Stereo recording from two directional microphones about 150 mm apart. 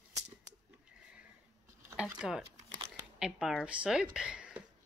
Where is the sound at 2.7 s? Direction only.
25° right (ahead or behind).